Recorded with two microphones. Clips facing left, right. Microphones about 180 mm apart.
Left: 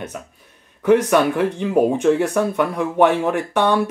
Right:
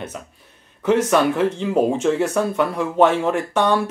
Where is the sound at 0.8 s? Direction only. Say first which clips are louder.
Left 2 dB; 15° left (ahead or behind).